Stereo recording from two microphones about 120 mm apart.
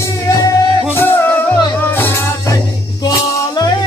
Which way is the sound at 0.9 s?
15° left (ahead or behind).